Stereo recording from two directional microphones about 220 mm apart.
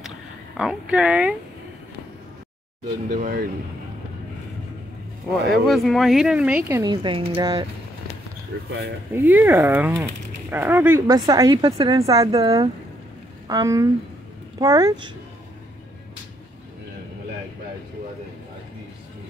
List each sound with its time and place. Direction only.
0.6 s speech: 5° right (ahead or behind)
3.1 s speech: 35° right (ahead or behind)
5.7 s speech: centre (ahead or behind)
6.8 s speech: 20° right (ahead or behind)
9.1 s speech: 10° right (ahead or behind)